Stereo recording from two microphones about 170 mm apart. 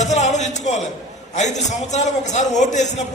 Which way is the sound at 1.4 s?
45° left (ahead or behind).